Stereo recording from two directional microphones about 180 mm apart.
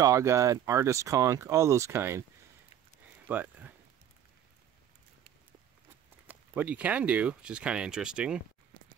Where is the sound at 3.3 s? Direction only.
10° right (ahead or behind).